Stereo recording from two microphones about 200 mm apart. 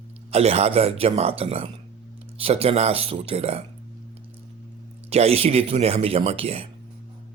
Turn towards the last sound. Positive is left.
turn(degrees=-30)  # may be behind; listen again after turning